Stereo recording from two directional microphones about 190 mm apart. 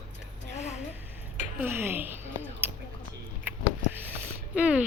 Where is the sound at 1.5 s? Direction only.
10° right (ahead or behind).